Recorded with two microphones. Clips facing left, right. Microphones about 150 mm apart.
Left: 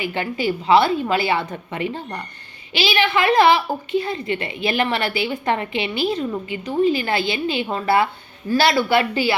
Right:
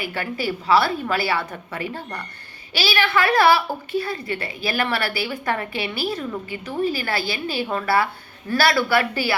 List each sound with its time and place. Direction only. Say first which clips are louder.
0.0 s a woman's voice: left 3 dB; 20° left (ahead or behind)